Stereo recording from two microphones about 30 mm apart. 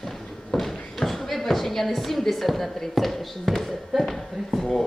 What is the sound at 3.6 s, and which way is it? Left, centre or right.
Speech, centre.